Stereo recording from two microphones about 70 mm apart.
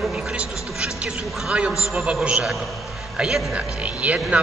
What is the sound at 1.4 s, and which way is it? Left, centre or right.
A man's voice, centre.